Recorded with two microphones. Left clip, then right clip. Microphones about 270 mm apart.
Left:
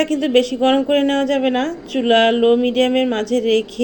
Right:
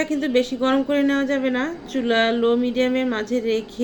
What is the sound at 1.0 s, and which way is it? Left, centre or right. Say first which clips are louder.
Speech: left 4 dB; centre.